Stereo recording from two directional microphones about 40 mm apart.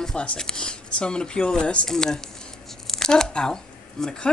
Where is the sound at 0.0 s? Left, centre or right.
Centre.